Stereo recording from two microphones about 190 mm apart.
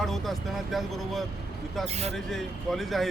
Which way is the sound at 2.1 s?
Centre (ahead or behind).